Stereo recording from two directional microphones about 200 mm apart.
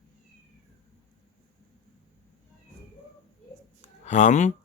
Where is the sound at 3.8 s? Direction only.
35° left (ahead or behind).